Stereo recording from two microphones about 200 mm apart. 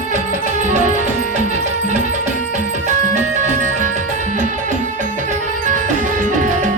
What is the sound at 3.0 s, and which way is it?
Music, 40° right (ahead or behind).